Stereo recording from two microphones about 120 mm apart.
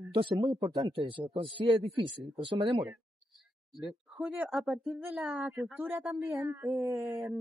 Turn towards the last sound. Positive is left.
turn(degrees=-25)  # may be behind; listen again after turning